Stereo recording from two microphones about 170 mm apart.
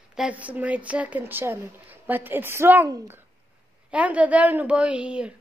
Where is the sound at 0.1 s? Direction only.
5° right (ahead or behind).